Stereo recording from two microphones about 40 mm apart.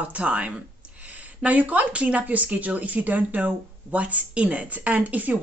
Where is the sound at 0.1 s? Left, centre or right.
Right.